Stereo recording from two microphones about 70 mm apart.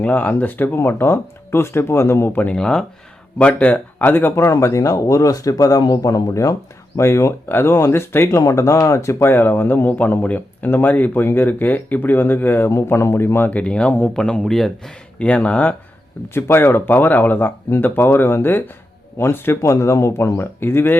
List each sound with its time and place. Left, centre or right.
0.0 s speech: left
2.6 s speech: centre; by 4.4 s left
4.4 s speech: left
8.4 s speech: left
13.5 s speech: centre
15.2 s speech: centre
16.3 s speech: left